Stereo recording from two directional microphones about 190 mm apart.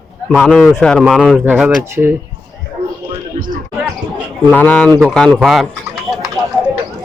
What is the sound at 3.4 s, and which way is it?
Music, 40° right (ahead or behind).